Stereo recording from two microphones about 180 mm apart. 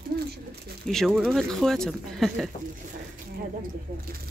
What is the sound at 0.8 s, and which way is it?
Speech, centre (ahead or behind).